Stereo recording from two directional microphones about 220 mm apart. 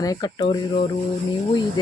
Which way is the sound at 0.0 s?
15° left (ahead or behind).